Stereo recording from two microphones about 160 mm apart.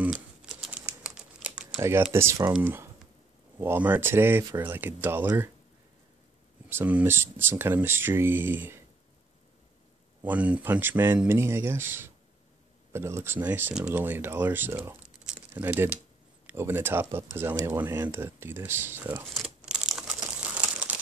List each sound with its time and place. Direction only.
0.0 s typing: 5° right (ahead or behind)
2.1 s speech: 20° right (ahead or behind)
6.7 s speech: 10° right (ahead or behind)
10.2 s speech: 10° right (ahead or behind)
19.3 s crumpling: 5° right (ahead or behind)